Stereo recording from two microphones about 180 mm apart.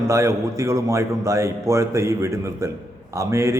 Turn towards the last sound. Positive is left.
turn(degrees=-15)  # may be behind; listen again after turning